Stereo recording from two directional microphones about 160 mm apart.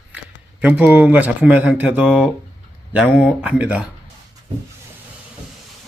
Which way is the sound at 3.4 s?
5° right (ahead or behind).